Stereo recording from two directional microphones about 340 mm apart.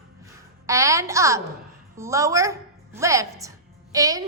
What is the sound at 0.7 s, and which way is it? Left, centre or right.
A woman's voice, centre.